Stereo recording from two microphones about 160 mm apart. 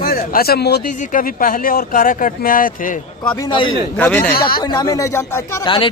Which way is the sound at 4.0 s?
10° left (ahead or behind).